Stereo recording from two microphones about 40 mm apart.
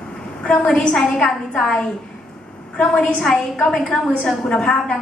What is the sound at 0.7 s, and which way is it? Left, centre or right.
Speech, centre.